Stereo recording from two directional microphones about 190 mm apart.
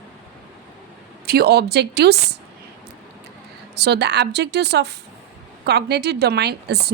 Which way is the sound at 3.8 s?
60° right (ahead or behind).